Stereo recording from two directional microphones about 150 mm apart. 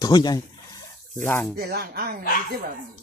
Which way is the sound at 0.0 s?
30° left (ahead or behind).